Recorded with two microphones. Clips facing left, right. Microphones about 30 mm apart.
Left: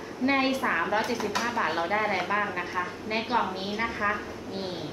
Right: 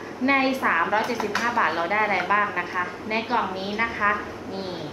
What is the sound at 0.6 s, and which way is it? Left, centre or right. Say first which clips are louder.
Speech: right 5 dB; right.